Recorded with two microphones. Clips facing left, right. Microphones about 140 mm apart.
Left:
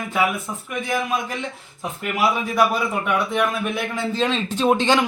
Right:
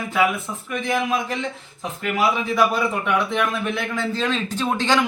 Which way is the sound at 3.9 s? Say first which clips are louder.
Left 3 dB; 15° left (ahead or behind).